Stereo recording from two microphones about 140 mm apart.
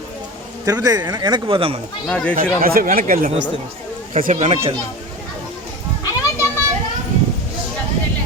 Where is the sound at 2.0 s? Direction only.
5° left (ahead or behind).